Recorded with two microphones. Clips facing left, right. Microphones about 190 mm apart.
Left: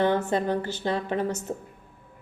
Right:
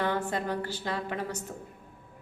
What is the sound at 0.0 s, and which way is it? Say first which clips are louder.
A woman's voice: left 6 dB; 25° left (ahead or behind).